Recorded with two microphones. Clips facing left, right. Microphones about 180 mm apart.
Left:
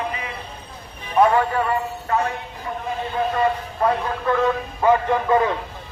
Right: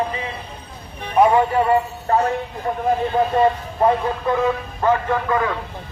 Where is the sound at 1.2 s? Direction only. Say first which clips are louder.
Right 2 dB; 20° right (ahead or behind).